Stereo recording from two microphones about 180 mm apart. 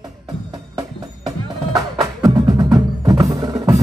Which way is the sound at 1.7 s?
20° right (ahead or behind).